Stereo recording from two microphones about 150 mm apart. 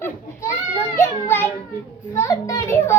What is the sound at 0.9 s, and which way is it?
Children playing, 15° left (ahead or behind).